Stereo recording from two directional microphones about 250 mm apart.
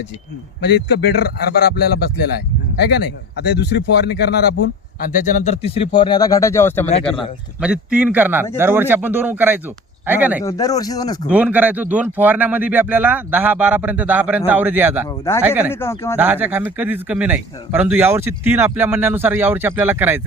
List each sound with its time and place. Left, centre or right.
0.6 s speech: left
2.8 s speech: left
5.1 s speech: left; by 6.8 s centre
7.6 s a man's voice: centre
10.4 s speech: centre
11.3 s speech: centre
15.0 s speech: centre
15.4 s speech: centre
15.7 s speech: centre
16.1 s speech: centre